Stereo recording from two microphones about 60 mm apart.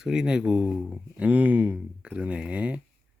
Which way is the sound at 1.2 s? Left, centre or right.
Right.